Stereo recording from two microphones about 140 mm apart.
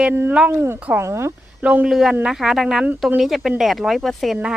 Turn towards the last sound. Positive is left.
turn(degrees=0)  # may be behind; listen again after turning